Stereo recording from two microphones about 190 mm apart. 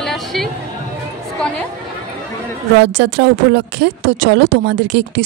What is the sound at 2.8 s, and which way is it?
A woman's voice, 65° right (ahead or behind).